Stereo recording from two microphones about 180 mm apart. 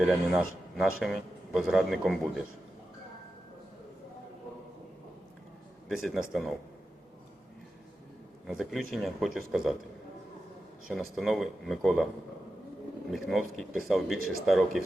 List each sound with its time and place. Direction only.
0.1 s a man's voice: 5° right (ahead or behind)
5.9 s a man's voice: centre (ahead or behind)
8.4 s a man's voice: centre (ahead or behind)
10.8 s a man's voice: centre (ahead or behind)
13.1 s a man's voice: centre (ahead or behind)